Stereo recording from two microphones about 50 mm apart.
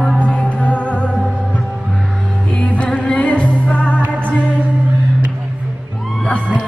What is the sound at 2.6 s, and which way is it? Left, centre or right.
Music, left.